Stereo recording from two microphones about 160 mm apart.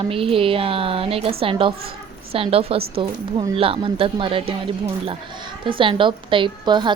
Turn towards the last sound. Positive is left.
turn(degrees=-30)  # may be behind; listen again after turning